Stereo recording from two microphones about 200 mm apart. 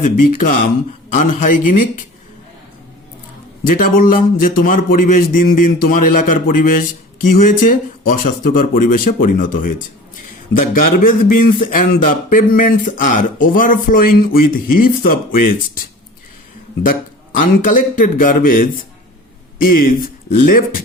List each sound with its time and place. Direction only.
0.0 s speech: 40° left (ahead or behind)
3.8 s speech: 45° left (ahead or behind)
17.4 s speech: 40° left (ahead or behind)